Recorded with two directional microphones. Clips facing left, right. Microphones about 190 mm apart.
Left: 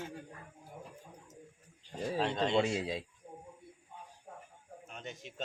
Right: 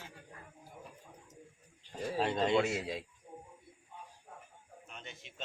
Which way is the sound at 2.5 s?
30° left (ahead or behind).